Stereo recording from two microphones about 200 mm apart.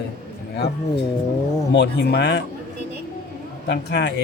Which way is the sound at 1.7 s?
60° left (ahead or behind).